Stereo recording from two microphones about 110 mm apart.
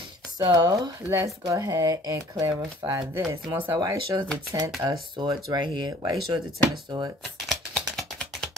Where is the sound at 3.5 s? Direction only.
35° right (ahead or behind).